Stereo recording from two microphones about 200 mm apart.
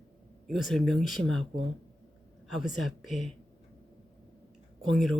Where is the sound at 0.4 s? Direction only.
Centre (ahead or behind).